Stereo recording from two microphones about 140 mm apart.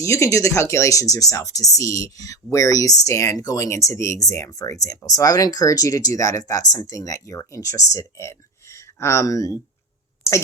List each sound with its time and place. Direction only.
0.0 s a woman's voice: 20° left (ahead or behind)